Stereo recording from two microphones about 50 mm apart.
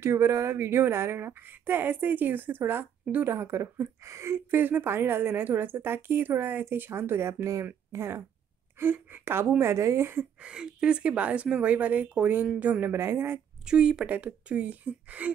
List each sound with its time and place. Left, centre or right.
0.0 s a woman's voice: right
3.3 s a woman's voice: right
4.5 s a woman's voice: right
7.9 s speech: right
8.7 s speech: right
9.6 s a woman's voice: right
10.4 s speech: centre
12.8 s a woman's voice: right
13.7 s speech: centre
14.0 s speech: right